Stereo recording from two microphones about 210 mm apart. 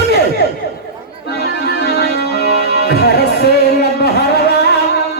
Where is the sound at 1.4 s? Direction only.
50° left (ahead or behind).